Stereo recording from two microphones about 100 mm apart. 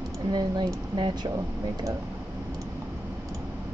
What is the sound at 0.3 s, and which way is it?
Speech, 45° right (ahead or behind).